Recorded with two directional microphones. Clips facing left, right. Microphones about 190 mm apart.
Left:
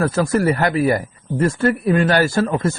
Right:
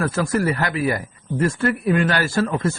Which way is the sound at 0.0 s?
35° left (ahead or behind).